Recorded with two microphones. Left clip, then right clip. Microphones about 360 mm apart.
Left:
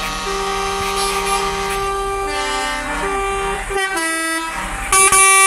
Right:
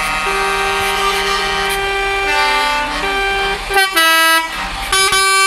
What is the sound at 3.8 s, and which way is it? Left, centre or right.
Vehicle, right.